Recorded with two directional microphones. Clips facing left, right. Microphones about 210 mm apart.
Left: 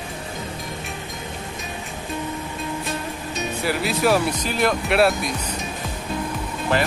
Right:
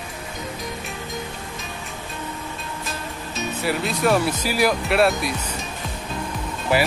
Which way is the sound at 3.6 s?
Centre (ahead or behind).